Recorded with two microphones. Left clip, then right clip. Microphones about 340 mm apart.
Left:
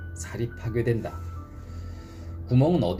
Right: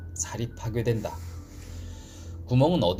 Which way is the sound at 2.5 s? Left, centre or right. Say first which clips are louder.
Right 1 dB; right.